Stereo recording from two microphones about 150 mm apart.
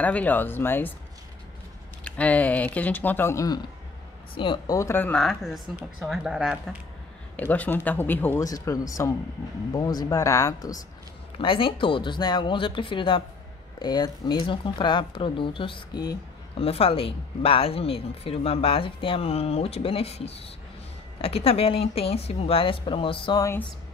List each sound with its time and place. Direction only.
0.0 s speech: 10° left (ahead or behind)
2.0 s speech: 10° left (ahead or behind)
4.4 s speech: 35° left (ahead or behind)
4.7 s speech: 15° left (ahead or behind)
5.2 s a woman's voice: centre (ahead or behind)
7.3 s speech: 10° left (ahead or behind)
8.5 s speech: 25° left (ahead or behind)
11.3 s speech: 35° left (ahead or behind)
16.5 s speech: 40° left (ahead or behind)